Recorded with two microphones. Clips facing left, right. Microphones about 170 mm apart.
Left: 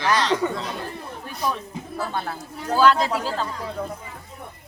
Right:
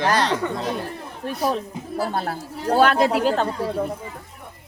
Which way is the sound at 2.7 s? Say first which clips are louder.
Right 2 dB; 60° right (ahead or behind).